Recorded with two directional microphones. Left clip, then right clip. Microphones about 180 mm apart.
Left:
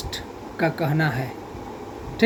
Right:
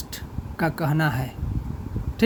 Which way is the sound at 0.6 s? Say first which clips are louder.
Left 2 dB; 50° right (ahead or behind).